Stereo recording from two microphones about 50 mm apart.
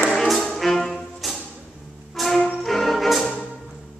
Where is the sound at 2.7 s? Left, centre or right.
Centre.